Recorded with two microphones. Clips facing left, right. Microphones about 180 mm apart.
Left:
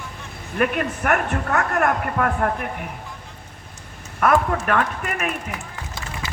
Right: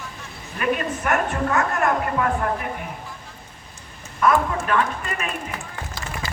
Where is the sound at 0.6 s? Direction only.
60° left (ahead or behind).